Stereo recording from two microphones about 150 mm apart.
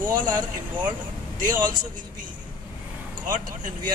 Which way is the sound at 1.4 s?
65° right (ahead or behind).